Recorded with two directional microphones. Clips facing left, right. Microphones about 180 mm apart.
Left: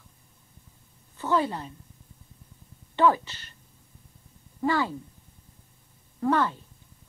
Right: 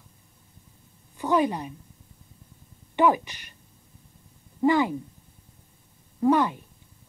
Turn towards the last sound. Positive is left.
turn(degrees=-15)  # may be behind; listen again after turning